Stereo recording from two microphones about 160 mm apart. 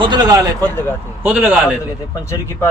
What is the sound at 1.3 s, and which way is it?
Speech, 10° right (ahead or behind).